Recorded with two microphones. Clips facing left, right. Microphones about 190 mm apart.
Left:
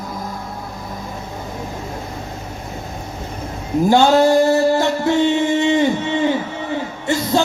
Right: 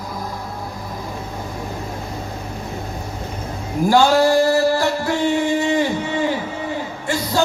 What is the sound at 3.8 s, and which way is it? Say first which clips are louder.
Music: left 1 dB; 25° left (ahead or behind).